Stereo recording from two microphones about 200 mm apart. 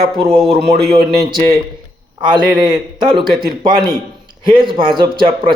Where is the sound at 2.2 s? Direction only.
25° right (ahead or behind).